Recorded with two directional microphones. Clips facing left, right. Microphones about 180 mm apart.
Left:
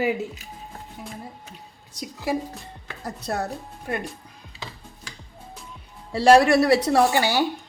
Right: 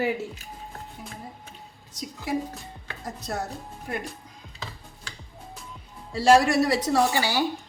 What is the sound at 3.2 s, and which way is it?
Speech, 60° left (ahead or behind).